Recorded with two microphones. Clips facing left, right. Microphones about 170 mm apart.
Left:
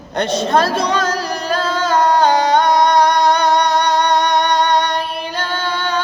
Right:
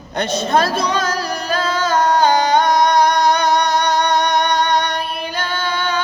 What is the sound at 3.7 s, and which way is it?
Music, 30° left (ahead or behind).